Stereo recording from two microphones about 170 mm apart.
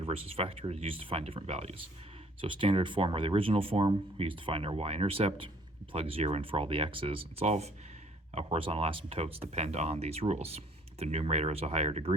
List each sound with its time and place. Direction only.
0.0 s speech: 35° right (ahead or behind)